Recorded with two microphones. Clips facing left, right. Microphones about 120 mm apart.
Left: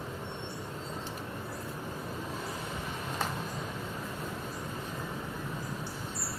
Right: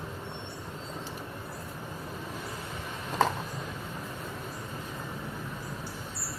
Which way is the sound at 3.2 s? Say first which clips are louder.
Right 10 dB; 90° right.